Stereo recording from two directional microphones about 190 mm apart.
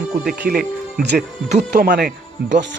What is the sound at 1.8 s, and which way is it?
Speech, 50° right (ahead or behind).